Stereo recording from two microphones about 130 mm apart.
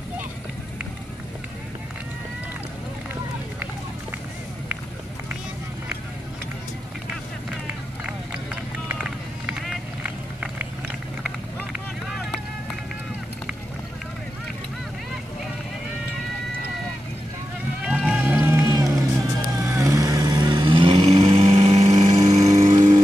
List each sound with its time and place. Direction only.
7.6 s run: 10° right (ahead or behind)
9.5 s vehicle: 5° right (ahead or behind)
12.1 s vehicle: centre (ahead or behind)
17.8 s music: 5° right (ahead or behind); by 19.0 s 25° right (ahead or behind)
19.6 s vehicle: 20° right (ahead or behind); by 22.9 s 55° right (ahead or behind)